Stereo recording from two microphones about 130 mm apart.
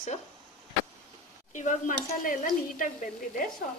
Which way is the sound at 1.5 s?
75° left (ahead or behind).